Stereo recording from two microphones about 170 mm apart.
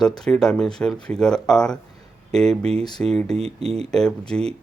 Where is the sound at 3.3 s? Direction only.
35° right (ahead or behind).